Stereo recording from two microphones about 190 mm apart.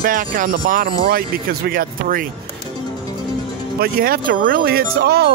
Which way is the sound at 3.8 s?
50° right (ahead or behind).